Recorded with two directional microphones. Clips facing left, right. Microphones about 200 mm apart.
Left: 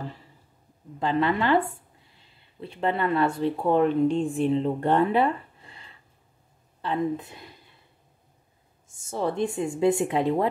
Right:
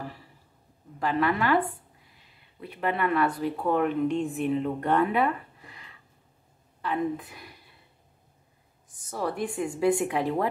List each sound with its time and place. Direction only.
0.9 s a woman's voice: 25° left (ahead or behind)
8.8 s speech: 25° left (ahead or behind)